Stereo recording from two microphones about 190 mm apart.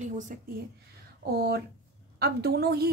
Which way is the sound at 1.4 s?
60° right (ahead or behind).